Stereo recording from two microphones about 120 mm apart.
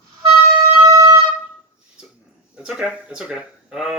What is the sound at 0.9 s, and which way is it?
Wind instrument, 30° right (ahead or behind).